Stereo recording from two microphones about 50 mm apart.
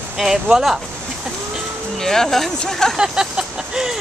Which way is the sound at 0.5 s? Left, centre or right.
Centre.